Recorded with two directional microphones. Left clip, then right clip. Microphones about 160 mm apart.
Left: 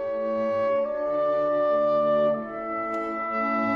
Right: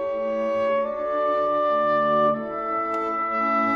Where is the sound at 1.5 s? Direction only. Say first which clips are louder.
Right 1 dB; centre (ahead or behind).